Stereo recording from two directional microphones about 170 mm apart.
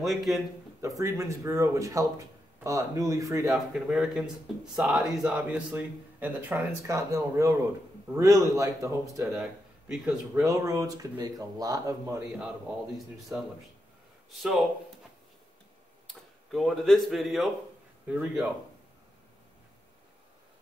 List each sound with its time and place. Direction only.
0.0 s speech: centre (ahead or behind)
0.7 s speech: 20° right (ahead or behind)
3.4 s speech: centre (ahead or behind); by 9.3 s 20° right (ahead or behind)
9.3 s a man's voice: centre (ahead or behind)
10.3 s speech: 20° right (ahead or behind)
12.9 s speech: centre (ahead or behind)
16.1 s speech: centre (ahead or behind)